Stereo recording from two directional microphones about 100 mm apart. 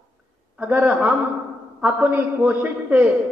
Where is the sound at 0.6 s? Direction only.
15° right (ahead or behind).